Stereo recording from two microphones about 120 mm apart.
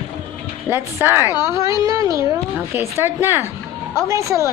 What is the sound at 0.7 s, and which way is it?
Speech, 20° right (ahead or behind).